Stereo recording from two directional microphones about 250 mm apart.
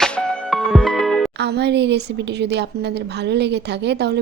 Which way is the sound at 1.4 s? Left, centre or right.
Right.